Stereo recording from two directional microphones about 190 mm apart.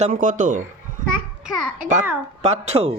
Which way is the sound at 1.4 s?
5° right (ahead or behind).